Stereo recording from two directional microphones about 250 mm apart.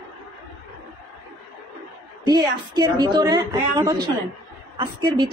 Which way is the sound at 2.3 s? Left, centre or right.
Centre.